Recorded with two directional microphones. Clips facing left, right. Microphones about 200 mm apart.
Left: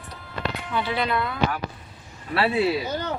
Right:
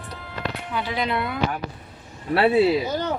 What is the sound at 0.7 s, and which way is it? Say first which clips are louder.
Speech: left 1 dB; 15° right (ahead or behind).